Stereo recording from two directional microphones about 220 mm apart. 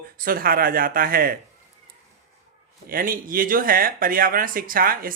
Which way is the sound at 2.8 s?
40° right (ahead or behind).